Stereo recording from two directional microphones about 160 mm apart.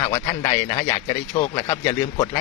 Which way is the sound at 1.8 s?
30° left (ahead or behind).